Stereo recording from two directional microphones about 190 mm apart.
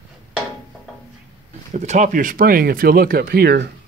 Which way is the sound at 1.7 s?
40° right (ahead or behind).